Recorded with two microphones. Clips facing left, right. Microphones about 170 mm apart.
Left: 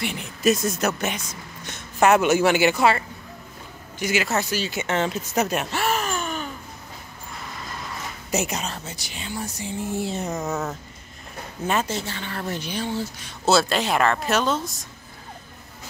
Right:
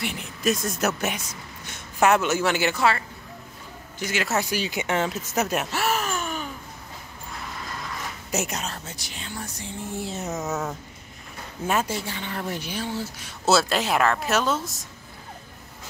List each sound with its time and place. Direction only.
0.0 s speech: centre (ahead or behind)
2.2 s speech: 15° left (ahead or behind)
4.0 s speech: 5° left (ahead or behind)
4.3 s speech: 10° right (ahead or behind)
8.3 s speech: centre (ahead or behind)